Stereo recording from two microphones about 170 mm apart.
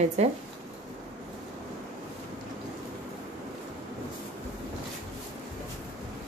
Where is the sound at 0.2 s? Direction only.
40° right (ahead or behind).